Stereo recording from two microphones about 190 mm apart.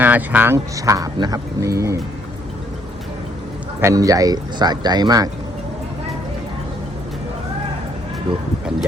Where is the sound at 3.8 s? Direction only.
15° right (ahead or behind).